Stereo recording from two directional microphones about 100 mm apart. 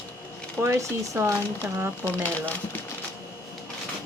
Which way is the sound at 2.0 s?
15° left (ahead or behind).